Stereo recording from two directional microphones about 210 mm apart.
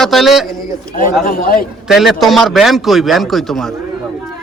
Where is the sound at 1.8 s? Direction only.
Centre (ahead or behind).